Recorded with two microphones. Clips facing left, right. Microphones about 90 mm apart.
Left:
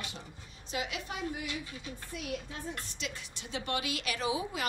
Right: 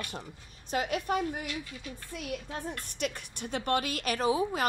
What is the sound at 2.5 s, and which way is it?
A woman's voice, 55° right (ahead or behind).